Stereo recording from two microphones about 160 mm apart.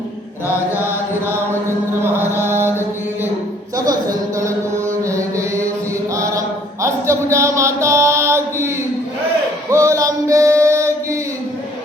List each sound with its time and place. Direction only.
1.3 s chant: 15° right (ahead or behind)
6.8 s mantra: 20° right (ahead or behind)
9.6 s chant: 20° right (ahead or behind)